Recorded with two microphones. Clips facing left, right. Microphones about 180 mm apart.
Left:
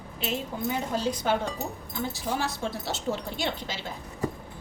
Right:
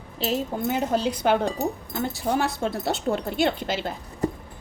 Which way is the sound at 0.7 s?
60° right (ahead or behind).